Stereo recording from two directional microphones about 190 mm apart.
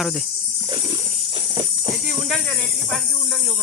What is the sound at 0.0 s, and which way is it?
Speech, centre (ahead or behind).